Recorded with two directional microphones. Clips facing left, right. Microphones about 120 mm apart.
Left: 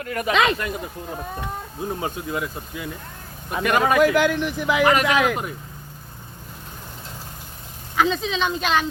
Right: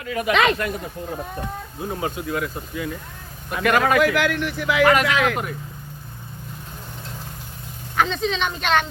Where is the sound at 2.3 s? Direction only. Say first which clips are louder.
Right 1 dB; 20° left (ahead or behind).